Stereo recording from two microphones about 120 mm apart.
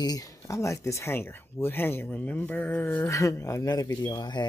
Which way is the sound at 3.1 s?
25° left (ahead or behind).